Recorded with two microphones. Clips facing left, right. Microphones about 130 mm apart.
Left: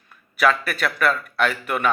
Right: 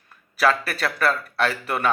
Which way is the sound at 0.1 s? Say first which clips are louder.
Left 1 dB; 30° right (ahead or behind).